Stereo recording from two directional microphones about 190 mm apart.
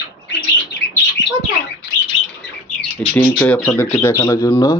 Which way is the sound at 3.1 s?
10° left (ahead or behind).